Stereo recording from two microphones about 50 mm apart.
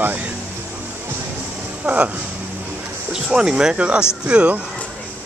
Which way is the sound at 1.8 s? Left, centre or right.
Right.